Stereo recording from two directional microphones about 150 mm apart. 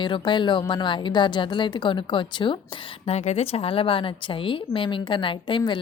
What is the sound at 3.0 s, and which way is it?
A woman's voice, 45° left (ahead or behind).